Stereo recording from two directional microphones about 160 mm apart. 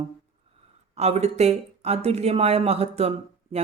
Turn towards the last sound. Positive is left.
turn(degrees=-40)  # may be behind; listen again after turning